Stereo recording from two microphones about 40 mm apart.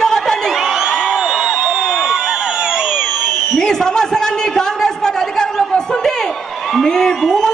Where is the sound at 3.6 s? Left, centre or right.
Centre.